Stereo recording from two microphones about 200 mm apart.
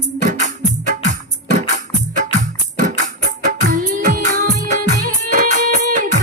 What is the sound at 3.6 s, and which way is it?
Music, 40° right (ahead or behind).